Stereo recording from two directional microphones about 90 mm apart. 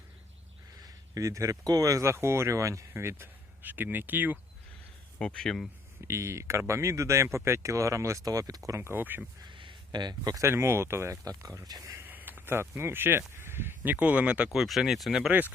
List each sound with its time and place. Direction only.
0.8 s speech: 40° right (ahead or behind); by 4.4 s 20° right (ahead or behind)
5.2 s speech: 5° left (ahead or behind)
6.1 s speech: 30° right (ahead or behind)
8.8 s speech: 25° right (ahead or behind)
9.4 s a sound: 65° right (ahead or behind)
10.3 s speech: 30° right (ahead or behind)
11.3 s speech: 40° right (ahead or behind)
12.0 s speech: 20° right (ahead or behind)
14.5 s speech: centre (ahead or behind)
15.3 s speech: 20° right (ahead or behind)